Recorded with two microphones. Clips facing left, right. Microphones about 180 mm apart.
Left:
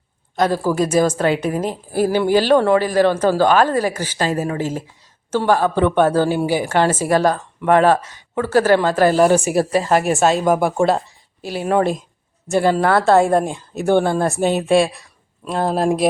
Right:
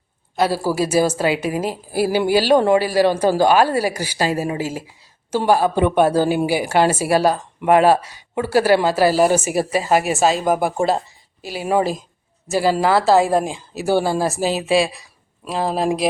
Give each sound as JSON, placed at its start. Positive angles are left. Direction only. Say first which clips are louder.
{"t": 0.3, "sound": "a woman's voice", "louder": "left 1 dB", "side_deg": -10}